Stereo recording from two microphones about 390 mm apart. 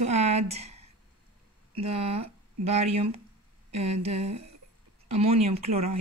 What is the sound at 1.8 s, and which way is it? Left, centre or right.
Speech, centre.